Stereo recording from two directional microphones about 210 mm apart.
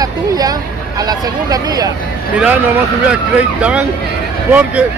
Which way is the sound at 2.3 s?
5° right (ahead or behind).